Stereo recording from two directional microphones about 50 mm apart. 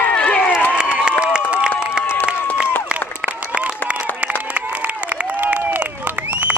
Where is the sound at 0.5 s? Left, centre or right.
Left.